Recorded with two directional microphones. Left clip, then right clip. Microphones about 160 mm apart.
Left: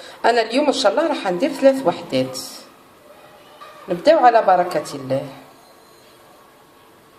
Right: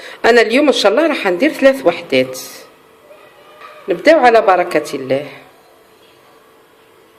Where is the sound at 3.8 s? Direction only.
45° right (ahead or behind).